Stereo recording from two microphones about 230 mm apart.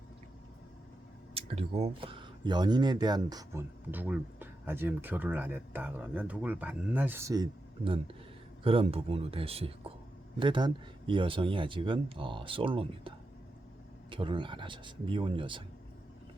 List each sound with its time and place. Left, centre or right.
1.3 s speech: right
8.6 s speech: right